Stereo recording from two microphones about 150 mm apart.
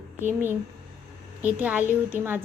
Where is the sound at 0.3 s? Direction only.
15° right (ahead or behind).